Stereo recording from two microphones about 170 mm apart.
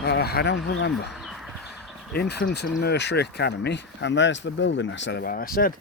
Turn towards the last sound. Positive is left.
turn(degrees=60)  # may be behind; listen again after turning